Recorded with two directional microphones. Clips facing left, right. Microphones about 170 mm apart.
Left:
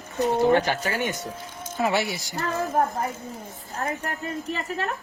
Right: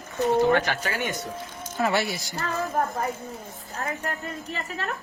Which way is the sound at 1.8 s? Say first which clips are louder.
Even; 15° left (ahead or behind).